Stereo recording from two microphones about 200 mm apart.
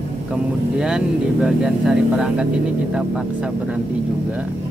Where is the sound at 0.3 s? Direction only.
5° right (ahead or behind).